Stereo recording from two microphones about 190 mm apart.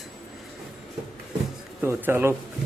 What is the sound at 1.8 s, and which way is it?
Speech, 10° right (ahead or behind).